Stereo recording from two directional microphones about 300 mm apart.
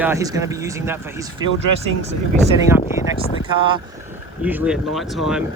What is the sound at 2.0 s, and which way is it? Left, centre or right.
Speech, right.